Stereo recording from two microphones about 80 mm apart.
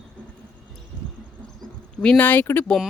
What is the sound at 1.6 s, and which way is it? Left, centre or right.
Speech, centre.